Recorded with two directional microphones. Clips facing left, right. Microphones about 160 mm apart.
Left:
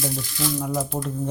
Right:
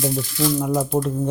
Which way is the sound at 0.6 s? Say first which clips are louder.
Right 5 dB; 60° right (ahead or behind).